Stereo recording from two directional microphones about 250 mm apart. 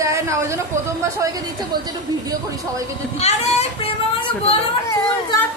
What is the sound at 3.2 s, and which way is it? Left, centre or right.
Speech, left.